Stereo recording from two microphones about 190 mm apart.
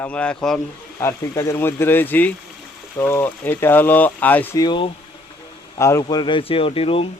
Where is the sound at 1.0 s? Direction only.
15° left (ahead or behind).